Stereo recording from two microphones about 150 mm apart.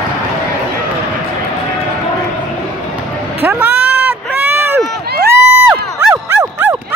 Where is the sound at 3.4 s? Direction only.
15° right (ahead or behind).